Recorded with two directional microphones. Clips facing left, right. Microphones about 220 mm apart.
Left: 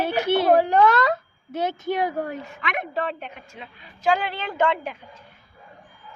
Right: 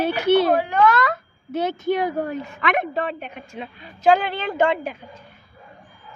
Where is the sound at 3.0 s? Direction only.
15° right (ahead or behind).